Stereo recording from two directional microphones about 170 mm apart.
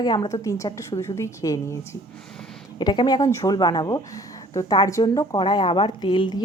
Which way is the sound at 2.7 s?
25° left (ahead or behind).